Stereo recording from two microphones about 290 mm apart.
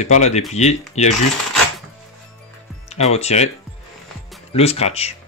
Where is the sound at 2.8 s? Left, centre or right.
Left.